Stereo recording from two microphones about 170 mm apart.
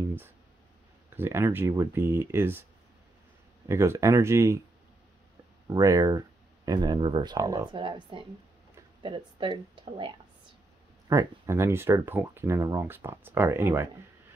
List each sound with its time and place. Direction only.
1.1 s speech: 15° right (ahead or behind)
3.6 s speech: 15° right (ahead or behind)
5.7 s speech: 20° right (ahead or behind)
11.1 s speech: 15° right (ahead or behind)